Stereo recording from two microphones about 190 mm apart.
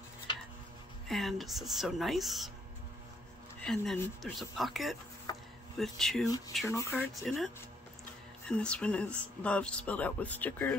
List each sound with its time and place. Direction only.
1.0 s speech: centre (ahead or behind)
3.6 s speech: 5° left (ahead or behind)
5.3 s a sound: 20° left (ahead or behind)
5.8 s speech: centre (ahead or behind)
6.2 s speech: 20° left (ahead or behind)
7.2 s speech: centre (ahead or behind)